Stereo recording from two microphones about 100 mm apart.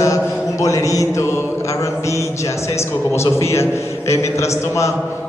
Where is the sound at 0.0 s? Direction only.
35° left (ahead or behind).